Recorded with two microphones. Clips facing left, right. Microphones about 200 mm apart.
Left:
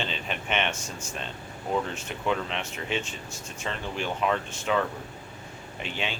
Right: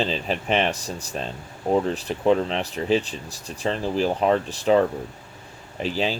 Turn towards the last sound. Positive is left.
turn(degrees=-35)  # may be behind; listen again after turning